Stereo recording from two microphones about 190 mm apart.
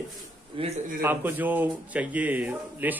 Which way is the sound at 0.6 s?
25° right (ahead or behind).